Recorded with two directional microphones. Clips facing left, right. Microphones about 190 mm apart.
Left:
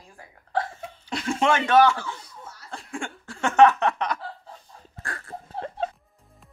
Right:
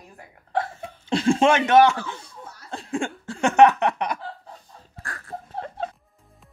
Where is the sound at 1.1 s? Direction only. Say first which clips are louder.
Right 5 dB; 30° right (ahead or behind).